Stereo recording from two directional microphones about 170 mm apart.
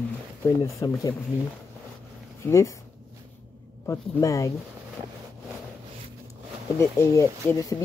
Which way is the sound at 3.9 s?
20° left (ahead or behind).